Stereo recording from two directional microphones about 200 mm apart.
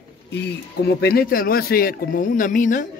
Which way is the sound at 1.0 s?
50° left (ahead or behind).